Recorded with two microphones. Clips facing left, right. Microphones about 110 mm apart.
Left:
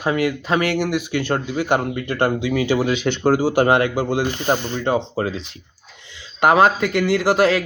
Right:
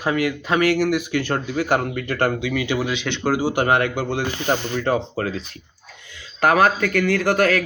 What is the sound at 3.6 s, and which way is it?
Speech, 30° left (ahead or behind).